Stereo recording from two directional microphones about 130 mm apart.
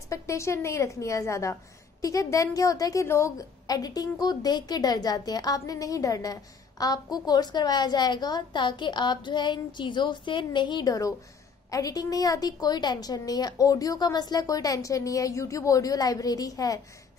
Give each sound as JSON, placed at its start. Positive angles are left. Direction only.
{"t": 0.1, "sound": "a woman's voice", "side_deg": 20}